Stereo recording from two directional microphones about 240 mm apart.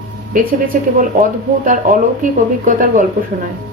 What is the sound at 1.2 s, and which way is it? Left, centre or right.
Speech, right.